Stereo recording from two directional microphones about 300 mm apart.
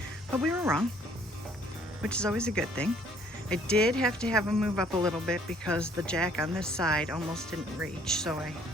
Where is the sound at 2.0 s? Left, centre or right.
Centre.